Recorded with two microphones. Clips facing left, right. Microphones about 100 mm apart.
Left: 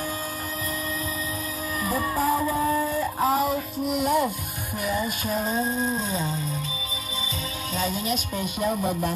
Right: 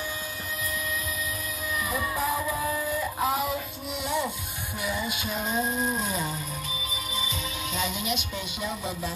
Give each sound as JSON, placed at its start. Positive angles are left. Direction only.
{"t": 1.8, "sound": "music", "side_deg": 35}
{"t": 4.0, "sound": "music", "side_deg": 45}
{"t": 7.7, "sound": "music", "side_deg": 40}